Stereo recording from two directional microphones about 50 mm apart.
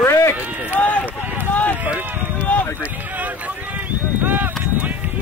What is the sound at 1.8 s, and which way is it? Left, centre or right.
Speech, right.